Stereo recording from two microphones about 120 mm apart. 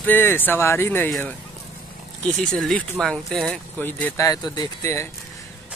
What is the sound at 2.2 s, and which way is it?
Speech, 5° left (ahead or behind).